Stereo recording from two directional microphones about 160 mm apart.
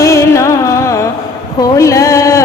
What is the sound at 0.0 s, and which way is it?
Music, 20° left (ahead or behind).